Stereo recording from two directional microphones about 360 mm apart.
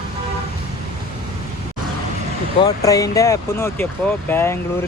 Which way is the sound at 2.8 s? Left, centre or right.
Centre.